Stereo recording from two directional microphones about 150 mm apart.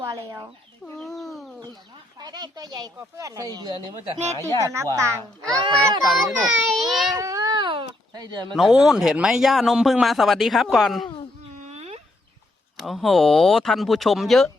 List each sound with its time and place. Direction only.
0.9 s chicken: centre (ahead or behind)
2.1 s speech: 25° right (ahead or behind)
6.4 s a man's voice: centre (ahead or behind)
7.2 s baby cry: 20° right (ahead or behind)
8.5 s a man's voice: centre (ahead or behind)
11.6 s a sound: 45° right (ahead or behind)
12.7 s a man's voice: centre (ahead or behind)